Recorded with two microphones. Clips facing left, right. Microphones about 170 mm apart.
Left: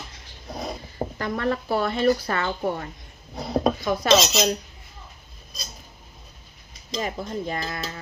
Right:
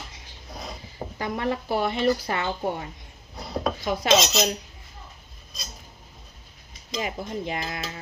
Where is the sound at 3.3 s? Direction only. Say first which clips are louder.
Left 6 dB; 40° left (ahead or behind).